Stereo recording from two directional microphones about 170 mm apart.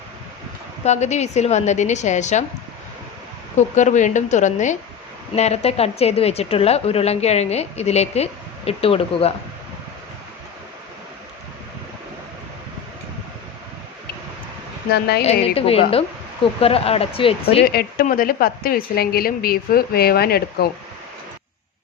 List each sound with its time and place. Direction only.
0.9 s a woman's voice: 40° left (ahead or behind)
3.6 s a woman's voice: 45° left (ahead or behind)
14.8 s speech: 70° left (ahead or behind)
15.2 s a woman's voice: 35° left (ahead or behind)
17.7 s a woman's voice: 60° left (ahead or behind)